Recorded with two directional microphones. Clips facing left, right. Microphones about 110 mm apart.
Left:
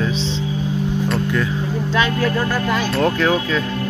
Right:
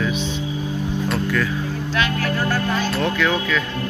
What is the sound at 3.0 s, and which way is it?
Speech, 35° left (ahead or behind).